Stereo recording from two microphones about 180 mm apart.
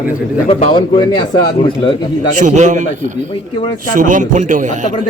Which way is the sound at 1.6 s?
30° left (ahead or behind).